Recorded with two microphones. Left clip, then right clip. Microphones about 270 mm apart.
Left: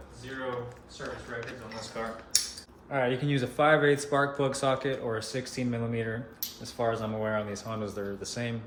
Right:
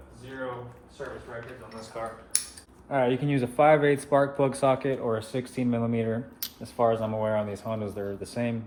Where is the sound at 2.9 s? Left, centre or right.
Right.